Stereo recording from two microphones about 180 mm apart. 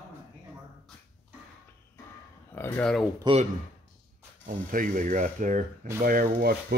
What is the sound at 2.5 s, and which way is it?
Speech, 10° left (ahead or behind).